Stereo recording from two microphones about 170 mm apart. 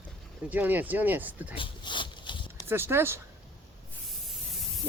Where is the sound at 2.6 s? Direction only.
15° right (ahead or behind).